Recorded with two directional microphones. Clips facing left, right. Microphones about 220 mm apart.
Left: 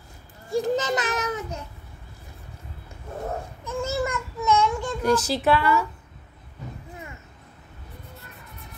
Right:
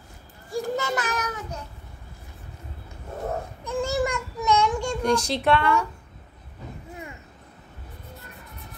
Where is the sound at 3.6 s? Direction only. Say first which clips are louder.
Right 2 dB; 15° right (ahead or behind).